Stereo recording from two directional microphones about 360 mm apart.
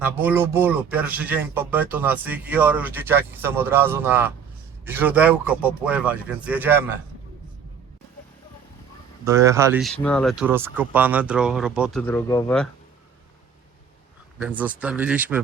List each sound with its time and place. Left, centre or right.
0.0 s speech: centre
9.2 s speech: centre
14.4 s speech: centre